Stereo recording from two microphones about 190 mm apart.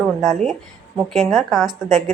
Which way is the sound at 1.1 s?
Centre (ahead or behind).